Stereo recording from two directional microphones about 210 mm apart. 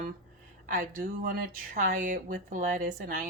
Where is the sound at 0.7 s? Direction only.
40° right (ahead or behind).